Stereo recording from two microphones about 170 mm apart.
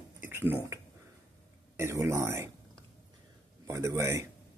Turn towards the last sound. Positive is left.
turn(degrees=-15)  # may be behind; listen again after turning